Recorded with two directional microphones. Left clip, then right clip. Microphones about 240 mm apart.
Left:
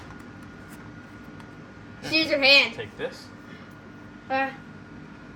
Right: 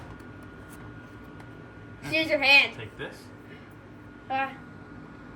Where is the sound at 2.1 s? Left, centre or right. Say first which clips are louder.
Left 2 dB; left.